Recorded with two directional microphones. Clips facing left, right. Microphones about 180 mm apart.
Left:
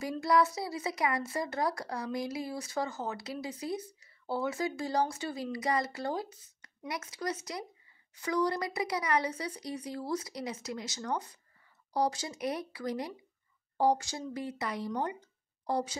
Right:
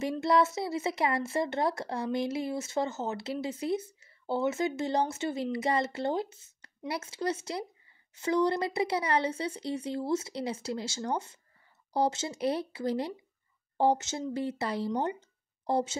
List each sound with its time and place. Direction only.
0.0 s speech: 25° right (ahead or behind)